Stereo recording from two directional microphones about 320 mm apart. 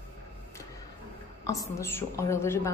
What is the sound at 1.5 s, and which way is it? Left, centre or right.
A woman's voice, centre.